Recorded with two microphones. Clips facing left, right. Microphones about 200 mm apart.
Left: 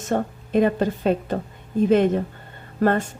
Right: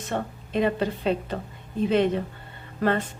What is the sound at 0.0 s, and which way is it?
Speech, 45° left (ahead or behind).